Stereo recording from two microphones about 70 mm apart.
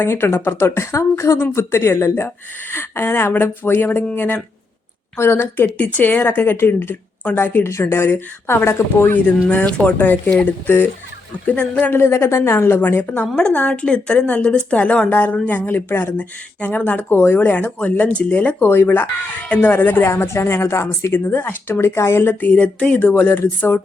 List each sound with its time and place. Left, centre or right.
0.0 s speech: left
9.2 s speech: left
11.9 s speech: left
13.2 s speech: centre
13.5 s speech: left
21.3 s speech: left